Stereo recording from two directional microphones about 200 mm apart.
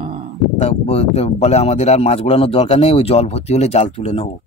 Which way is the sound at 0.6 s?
30° left (ahead or behind).